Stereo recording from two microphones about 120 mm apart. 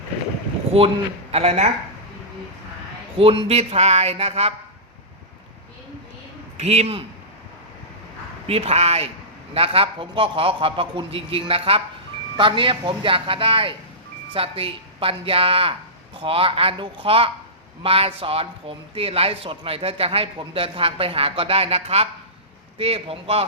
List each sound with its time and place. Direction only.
0.7 s a man's voice: 55° right (ahead or behind)
3.2 s a man's voice: 55° right (ahead or behind)
6.6 s a man's voice: 60° right (ahead or behind)
8.4 s a man's voice: 60° right (ahead or behind)
9.6 s a man's voice: 50° right (ahead or behind)